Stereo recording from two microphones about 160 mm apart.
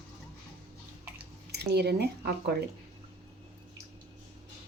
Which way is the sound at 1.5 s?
90° right.